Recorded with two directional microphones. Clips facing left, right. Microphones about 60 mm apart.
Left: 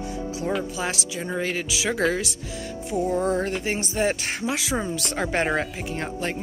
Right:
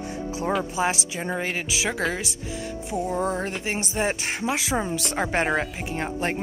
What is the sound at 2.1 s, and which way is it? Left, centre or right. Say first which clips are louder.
Speech: left 1 dB; centre.